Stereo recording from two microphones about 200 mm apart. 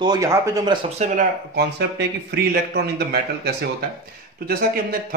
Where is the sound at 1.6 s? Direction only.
55° right (ahead or behind).